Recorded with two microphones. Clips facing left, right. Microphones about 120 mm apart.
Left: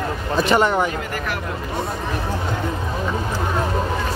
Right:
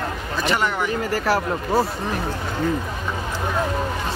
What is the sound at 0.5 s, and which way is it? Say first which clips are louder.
Speech: left 6 dB; 30° left (ahead or behind).